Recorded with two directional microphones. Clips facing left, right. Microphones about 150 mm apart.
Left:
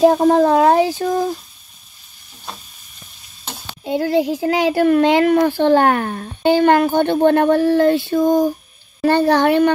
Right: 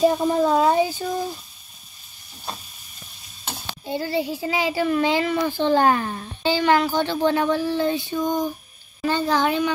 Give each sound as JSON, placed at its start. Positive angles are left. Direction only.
{"t": 0.0, "sound": "speech", "side_deg": 80}
{"t": 3.8, "sound": "a child's voice", "side_deg": 60}
{"t": 8.2, "sound": "a sound", "side_deg": 40}
{"t": 9.0, "sound": "a child's voice", "side_deg": 60}